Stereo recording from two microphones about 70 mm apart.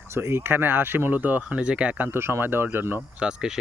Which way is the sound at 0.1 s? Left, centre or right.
Right.